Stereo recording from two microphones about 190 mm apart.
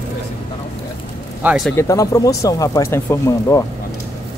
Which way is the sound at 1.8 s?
15° left (ahead or behind).